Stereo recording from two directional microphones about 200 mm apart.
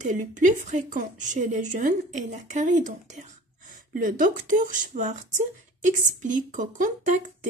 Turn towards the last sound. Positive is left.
turn(degrees=-40)  # may be behind; listen again after turning